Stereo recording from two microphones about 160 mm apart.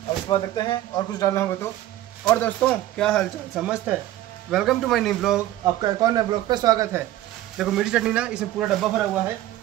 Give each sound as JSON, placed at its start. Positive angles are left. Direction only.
{"t": 0.3, "sound": "speech", "side_deg": 30}
{"t": 5.8, "sound": "speech", "side_deg": -25}
{"t": 7.5, "sound": "speech", "side_deg": -5}